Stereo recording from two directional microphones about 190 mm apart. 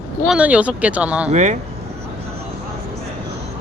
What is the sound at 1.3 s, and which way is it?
Speech, 40° right (ahead or behind).